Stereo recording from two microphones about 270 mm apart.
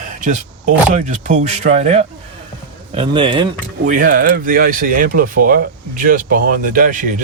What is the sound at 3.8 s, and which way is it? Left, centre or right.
Speech, right.